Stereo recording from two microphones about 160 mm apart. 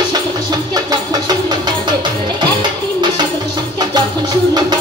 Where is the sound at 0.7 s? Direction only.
25° right (ahead or behind).